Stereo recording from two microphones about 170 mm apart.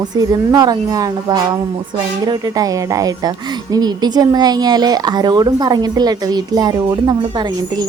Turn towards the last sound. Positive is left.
turn(degrees=-25)  # may be behind; listen again after turning